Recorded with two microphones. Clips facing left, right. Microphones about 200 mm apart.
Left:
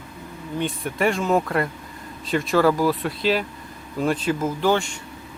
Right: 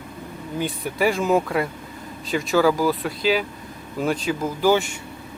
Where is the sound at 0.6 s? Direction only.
5° right (ahead or behind).